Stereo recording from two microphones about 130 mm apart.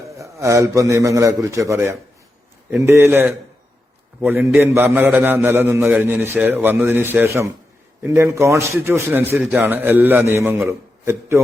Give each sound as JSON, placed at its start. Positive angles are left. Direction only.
{"t": 0.2, "sound": "a man's voice", "side_deg": -25}
{"t": 9.4, "sound": "a man's voice", "side_deg": -5}
{"t": 9.6, "sound": "a man's voice", "side_deg": -15}